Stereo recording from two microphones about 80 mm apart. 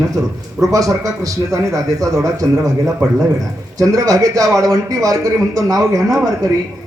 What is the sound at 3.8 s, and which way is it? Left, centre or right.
A man's voice, right.